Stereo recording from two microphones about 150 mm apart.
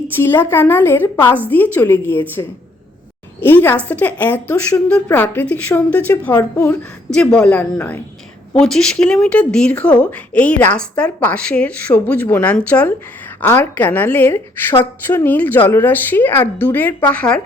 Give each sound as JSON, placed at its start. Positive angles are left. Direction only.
{"t": 0.2, "sound": "a woman's voice", "side_deg": 15}